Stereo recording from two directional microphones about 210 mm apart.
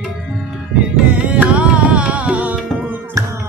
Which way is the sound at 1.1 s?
5° right (ahead or behind).